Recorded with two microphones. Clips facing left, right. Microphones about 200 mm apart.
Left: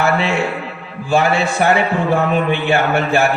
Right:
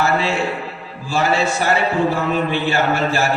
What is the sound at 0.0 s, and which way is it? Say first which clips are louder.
A man's voice: left 2 dB; 60° left (ahead or behind).